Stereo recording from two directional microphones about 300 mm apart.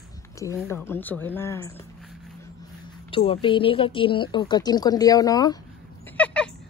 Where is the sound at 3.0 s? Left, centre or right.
Centre.